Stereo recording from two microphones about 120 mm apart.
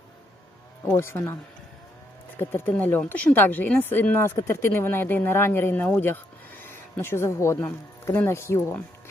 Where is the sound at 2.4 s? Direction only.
15° left (ahead or behind).